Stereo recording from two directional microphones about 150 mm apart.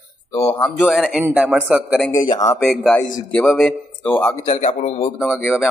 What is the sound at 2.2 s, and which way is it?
Speech, 25° left (ahead or behind).